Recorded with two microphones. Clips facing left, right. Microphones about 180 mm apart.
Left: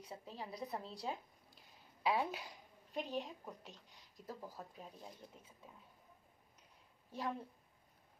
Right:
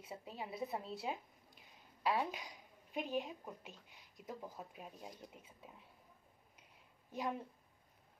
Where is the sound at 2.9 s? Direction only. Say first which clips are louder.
Right 2 dB; 5° right (ahead or behind).